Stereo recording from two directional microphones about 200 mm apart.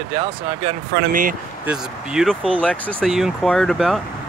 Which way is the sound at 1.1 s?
40° right (ahead or behind).